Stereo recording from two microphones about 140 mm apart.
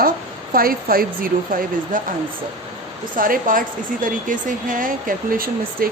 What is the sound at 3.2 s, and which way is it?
A woman's voice, 80° right.